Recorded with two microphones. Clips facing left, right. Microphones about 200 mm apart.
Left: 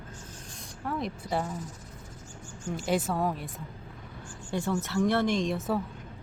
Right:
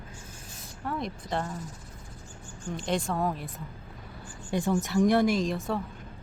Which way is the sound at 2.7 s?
5° left (ahead or behind).